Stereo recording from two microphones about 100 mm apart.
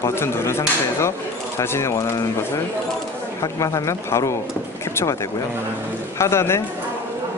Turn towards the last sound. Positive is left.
turn(degrees=25)  # may be behind; listen again after turning